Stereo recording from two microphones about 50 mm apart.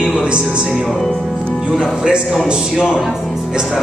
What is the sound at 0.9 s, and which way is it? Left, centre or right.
Speech, centre.